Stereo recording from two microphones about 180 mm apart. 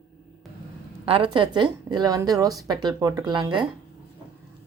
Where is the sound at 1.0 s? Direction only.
30° right (ahead or behind).